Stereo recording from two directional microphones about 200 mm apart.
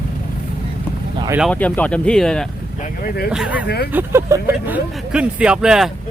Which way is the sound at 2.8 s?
50° left (ahead or behind).